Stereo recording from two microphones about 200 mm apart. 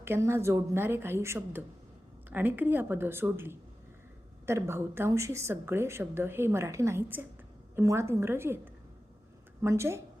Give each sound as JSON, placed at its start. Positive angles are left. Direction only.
{"t": 0.0, "sound": "a woman's voice", "side_deg": -15}